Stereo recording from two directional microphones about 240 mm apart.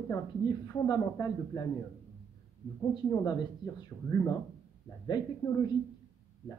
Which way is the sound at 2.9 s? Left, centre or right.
Centre.